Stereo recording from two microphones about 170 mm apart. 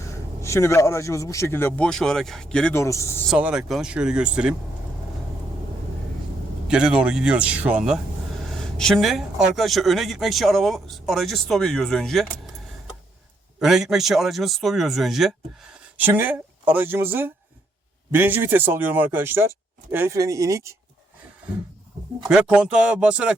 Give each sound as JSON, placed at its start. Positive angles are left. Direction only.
{"t": 0.0, "sound": "a man's voice", "side_deg": 15}
{"t": 2.7, "sound": "a man's voice", "side_deg": 15}
{"t": 3.2, "sound": "speech", "side_deg": -5}
{"t": 6.7, "sound": "speech", "side_deg": -5}
{"t": 16.0, "sound": "speech", "side_deg": -10}
{"t": 22.3, "sound": "speech", "side_deg": -5}